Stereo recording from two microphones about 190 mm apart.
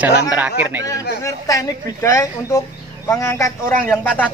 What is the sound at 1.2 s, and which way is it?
A woman's voice, 20° left (ahead or behind).